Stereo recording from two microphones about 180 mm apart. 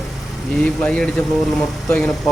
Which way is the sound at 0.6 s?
5° left (ahead or behind).